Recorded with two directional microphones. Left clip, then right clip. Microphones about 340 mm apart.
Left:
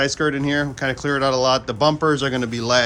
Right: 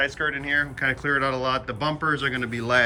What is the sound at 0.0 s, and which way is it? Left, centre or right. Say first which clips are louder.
Speech: left 5 dB; centre.